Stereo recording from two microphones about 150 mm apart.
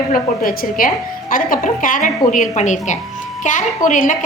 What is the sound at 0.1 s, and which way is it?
A woman's voice, 70° left (ahead or behind).